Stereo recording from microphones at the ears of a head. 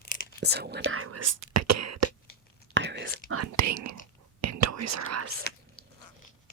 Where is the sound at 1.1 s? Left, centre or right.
Right.